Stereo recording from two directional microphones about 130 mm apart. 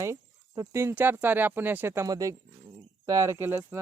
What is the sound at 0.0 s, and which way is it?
Speech, 25° right (ahead or behind).